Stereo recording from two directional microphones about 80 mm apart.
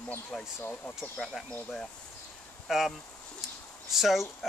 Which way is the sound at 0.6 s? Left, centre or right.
Left.